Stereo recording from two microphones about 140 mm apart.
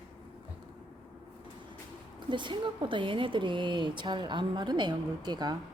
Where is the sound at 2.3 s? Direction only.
35° right (ahead or behind).